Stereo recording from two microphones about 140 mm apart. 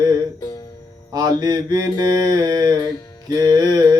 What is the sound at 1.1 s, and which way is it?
Mantra, 25° right (ahead or behind).